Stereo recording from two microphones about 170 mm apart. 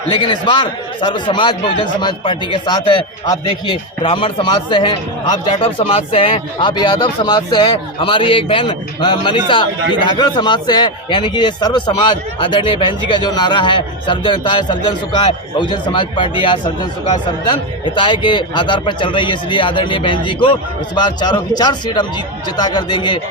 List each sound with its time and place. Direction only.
0.1 s a man's voice: 25° left (ahead or behind)